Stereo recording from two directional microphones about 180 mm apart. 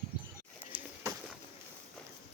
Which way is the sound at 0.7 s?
15° right (ahead or behind).